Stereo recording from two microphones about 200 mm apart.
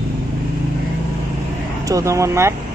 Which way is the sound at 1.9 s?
15° right (ahead or behind).